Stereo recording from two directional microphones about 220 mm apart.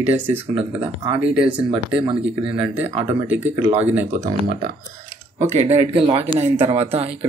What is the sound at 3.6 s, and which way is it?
Speech, 30° right (ahead or behind).